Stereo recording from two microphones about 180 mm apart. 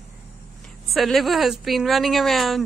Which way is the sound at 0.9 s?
Centre (ahead or behind).